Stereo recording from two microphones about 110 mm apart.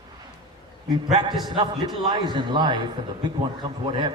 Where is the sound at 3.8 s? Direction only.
45° right (ahead or behind).